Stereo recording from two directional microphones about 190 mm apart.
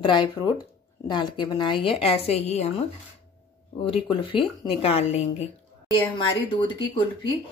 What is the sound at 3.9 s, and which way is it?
A woman's voice, 25° left (ahead or behind).